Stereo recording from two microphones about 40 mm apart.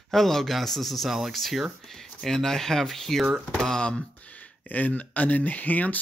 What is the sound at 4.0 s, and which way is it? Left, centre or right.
Speech, left.